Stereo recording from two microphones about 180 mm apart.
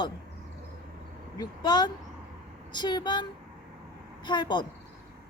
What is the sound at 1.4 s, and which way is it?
A woman's voice, 25° left (ahead or behind).